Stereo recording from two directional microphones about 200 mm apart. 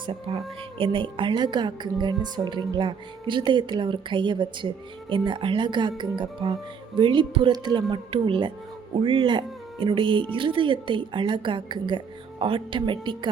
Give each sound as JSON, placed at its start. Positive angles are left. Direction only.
{"t": 0.0, "sound": "speech", "side_deg": -25}